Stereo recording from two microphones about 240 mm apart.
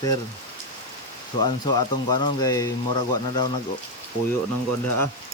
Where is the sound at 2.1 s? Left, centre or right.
Centre.